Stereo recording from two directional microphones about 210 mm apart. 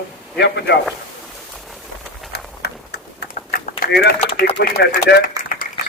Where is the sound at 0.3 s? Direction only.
55° left (ahead or behind).